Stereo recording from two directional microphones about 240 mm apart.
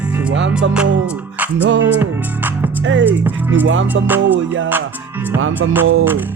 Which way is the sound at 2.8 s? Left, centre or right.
Right.